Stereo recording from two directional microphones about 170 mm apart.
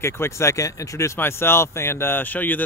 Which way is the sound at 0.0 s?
15° left (ahead or behind).